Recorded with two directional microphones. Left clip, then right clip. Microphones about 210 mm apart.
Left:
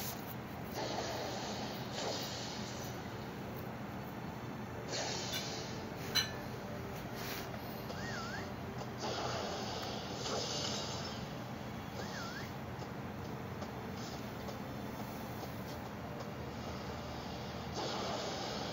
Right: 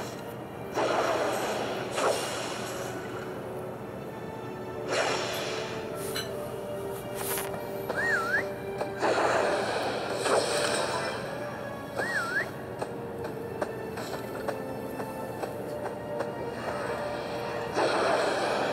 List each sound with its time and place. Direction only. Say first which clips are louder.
0.7 s a sound: right 14 dB; 15° right (ahead or behind)
4.8 s music: right 12 dB; 15° right (ahead or behind)
8.2 s music: right 15 dB; 15° right (ahead or behind)
9.0 s a sound: right 15 dB; 15° right (ahead or behind)
12.0 s music: right 17 dB; 15° right (ahead or behind)
16.2 s train: right 12 dB; 15° right (ahead or behind)
17.7 s snort: right 14 dB; 15° right (ahead or behind)